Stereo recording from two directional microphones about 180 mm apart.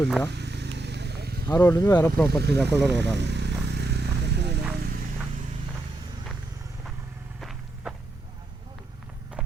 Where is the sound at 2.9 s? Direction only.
70° right (ahead or behind).